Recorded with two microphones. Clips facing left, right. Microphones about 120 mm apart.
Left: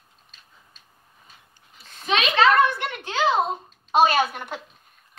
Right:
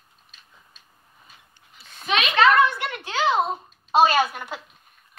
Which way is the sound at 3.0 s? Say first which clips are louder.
Left 1 dB; 25° left (ahead or behind).